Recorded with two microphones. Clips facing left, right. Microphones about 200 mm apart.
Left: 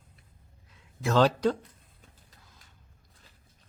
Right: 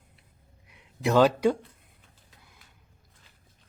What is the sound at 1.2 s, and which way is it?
Speech, 10° right (ahead or behind).